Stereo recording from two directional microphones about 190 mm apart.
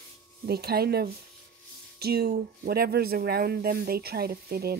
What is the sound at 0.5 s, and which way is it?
Speech, 55° right (ahead or behind).